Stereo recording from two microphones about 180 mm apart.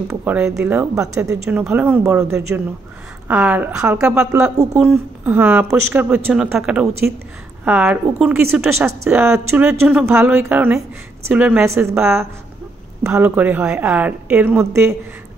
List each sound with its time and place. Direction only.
0.1 s a woman's voice: 10° right (ahead or behind)
1.3 s a woman's voice: 5° right (ahead or behind)
13.0 s a woman's voice: 10° right (ahead or behind)